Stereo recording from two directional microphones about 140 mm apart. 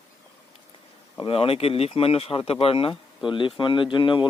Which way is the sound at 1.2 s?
40° left (ahead or behind).